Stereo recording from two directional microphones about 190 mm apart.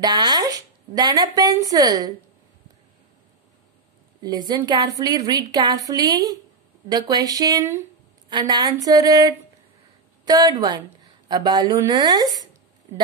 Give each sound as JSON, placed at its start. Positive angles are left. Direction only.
{"t": 0.0, "sound": "speech", "side_deg": -20}
{"t": 4.2, "sound": "a woman's voice", "side_deg": -20}